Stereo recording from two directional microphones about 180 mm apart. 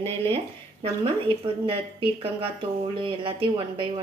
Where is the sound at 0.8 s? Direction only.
30° right (ahead or behind).